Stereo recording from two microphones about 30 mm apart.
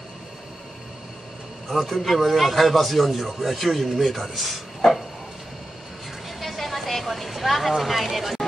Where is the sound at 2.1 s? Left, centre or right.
Centre.